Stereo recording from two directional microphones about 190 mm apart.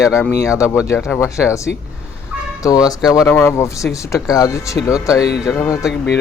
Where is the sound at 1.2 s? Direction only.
15° left (ahead or behind).